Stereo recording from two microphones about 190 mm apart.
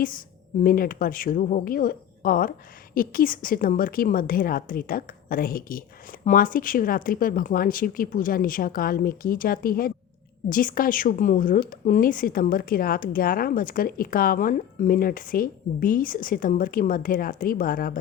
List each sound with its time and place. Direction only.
0.6 s a woman's voice: 50° left (ahead or behind)